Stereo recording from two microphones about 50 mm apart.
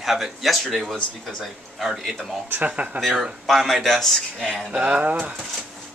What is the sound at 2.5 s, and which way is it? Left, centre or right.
Speech, right.